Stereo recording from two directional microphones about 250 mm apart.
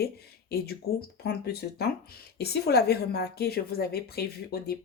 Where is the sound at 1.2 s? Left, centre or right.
Left.